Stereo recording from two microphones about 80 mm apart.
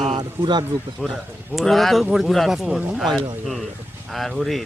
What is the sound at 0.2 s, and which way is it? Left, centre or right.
Speech, right.